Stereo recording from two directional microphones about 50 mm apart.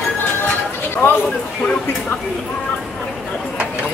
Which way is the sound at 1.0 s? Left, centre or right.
Left.